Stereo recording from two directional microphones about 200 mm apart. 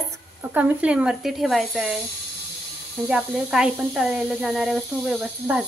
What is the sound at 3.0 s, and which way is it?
Speech, 5° right (ahead or behind).